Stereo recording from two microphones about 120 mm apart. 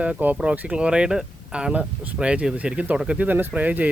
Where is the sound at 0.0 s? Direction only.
10° right (ahead or behind).